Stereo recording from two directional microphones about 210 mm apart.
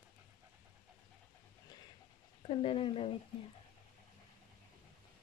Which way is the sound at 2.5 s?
25° left (ahead or behind).